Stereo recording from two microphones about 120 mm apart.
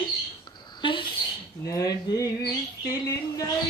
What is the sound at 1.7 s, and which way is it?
Dishes, 30° left (ahead or behind).